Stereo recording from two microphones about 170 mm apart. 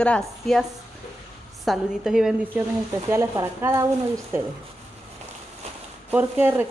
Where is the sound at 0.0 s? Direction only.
5° left (ahead or behind).